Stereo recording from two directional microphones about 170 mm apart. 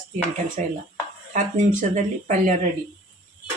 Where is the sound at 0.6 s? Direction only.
45° right (ahead or behind).